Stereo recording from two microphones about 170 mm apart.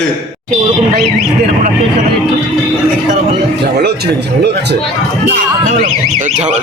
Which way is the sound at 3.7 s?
75° right (ahead or behind).